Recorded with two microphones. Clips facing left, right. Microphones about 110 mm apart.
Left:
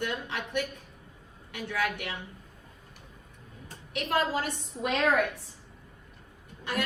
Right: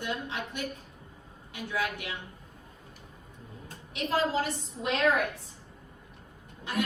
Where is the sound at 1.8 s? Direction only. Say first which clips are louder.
Left 3 dB; 60° left (ahead or behind).